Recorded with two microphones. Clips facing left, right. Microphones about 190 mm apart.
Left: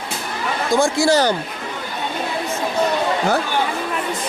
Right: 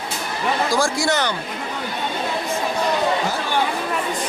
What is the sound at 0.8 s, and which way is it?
Speech, 25° left (ahead or behind).